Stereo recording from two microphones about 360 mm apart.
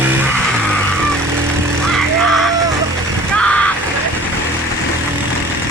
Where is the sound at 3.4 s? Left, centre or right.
Centre.